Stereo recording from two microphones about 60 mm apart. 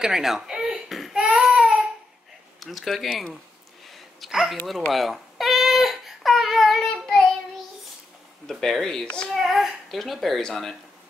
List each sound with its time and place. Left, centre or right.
0.0 s speech: centre
0.8 s a sound: centre
1.1 s baby cry: centre
1.4 s a sound: centre
2.6 s speech: centre
3.9 s a sound: centre
4.9 s crying: centre
8.5 s speech: centre
9.0 s speech: centre
9.3 s a child's voice: centre